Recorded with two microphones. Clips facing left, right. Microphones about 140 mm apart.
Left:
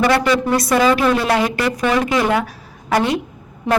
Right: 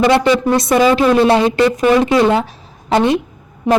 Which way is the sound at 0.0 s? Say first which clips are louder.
Right 4 dB; 20° right (ahead or behind).